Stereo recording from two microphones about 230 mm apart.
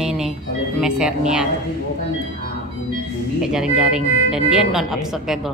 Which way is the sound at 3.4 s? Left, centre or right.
Centre.